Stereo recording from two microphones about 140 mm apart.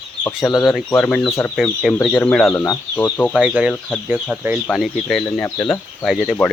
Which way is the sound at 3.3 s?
10° right (ahead or behind).